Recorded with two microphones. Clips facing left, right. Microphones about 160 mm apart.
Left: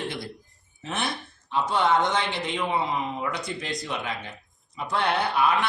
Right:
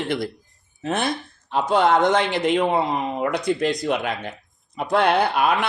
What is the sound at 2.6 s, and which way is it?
Speech, 50° right (ahead or behind).